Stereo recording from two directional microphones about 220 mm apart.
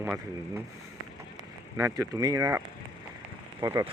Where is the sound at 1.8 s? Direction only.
15° right (ahead or behind).